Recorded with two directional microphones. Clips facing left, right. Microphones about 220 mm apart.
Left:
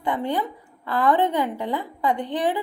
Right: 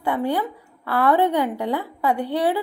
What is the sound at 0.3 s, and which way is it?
A woman's voice, 10° right (ahead or behind).